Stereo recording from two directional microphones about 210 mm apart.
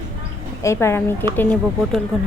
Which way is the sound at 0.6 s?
15° left (ahead or behind).